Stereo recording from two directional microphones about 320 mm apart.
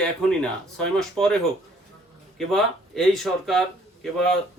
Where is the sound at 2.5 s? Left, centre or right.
Centre.